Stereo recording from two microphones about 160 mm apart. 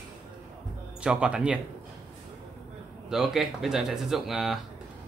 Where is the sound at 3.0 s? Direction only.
5° right (ahead or behind).